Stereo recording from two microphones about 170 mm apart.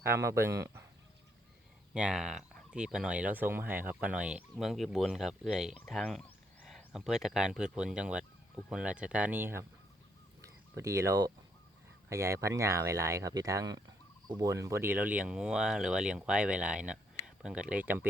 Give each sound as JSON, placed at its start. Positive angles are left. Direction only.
{"t": 0.0, "sound": "speech", "side_deg": -15}
{"t": 1.9, "sound": "speech", "side_deg": -5}